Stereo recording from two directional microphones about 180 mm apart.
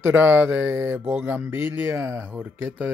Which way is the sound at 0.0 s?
10° right (ahead or behind).